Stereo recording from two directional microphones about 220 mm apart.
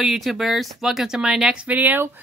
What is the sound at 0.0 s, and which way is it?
Speech, centre (ahead or behind).